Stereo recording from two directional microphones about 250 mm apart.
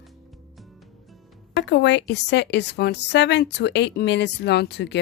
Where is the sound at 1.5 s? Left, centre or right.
Left.